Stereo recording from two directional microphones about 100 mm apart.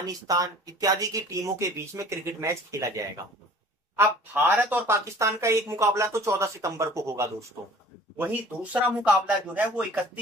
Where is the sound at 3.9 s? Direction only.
25° right (ahead or behind).